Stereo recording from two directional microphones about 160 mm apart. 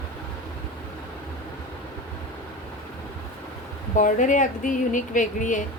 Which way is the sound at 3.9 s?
55° left (ahead or behind).